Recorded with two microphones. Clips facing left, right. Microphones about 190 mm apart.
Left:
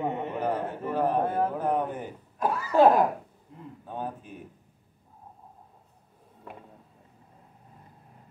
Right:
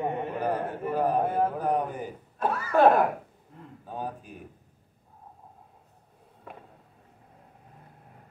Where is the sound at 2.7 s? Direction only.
20° left (ahead or behind).